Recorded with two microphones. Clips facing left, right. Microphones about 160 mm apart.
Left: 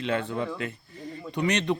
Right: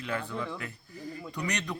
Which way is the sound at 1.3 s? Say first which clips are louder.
Left 10 dB; 25° left (ahead or behind).